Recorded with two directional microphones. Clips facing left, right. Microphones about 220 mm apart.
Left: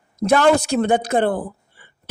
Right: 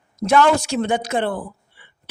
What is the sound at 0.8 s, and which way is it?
A woman's voice, 50° left (ahead or behind).